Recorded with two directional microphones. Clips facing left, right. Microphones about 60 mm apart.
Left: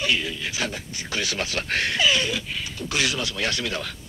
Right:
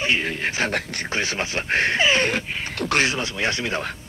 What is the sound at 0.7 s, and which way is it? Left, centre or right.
Speech, right.